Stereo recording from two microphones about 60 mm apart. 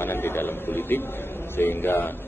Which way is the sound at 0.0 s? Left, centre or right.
Left.